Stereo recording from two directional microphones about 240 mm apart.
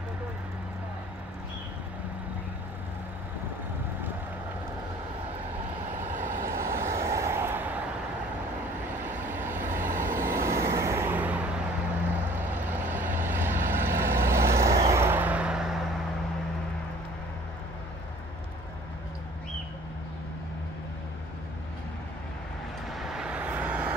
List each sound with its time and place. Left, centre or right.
6.0 s vehicle: right
6.5 s vehicle: centre
9.0 s vehicle: centre
9.8 s vehicle: right
10.4 s vehicle: centre
22.8 s vehicle: centre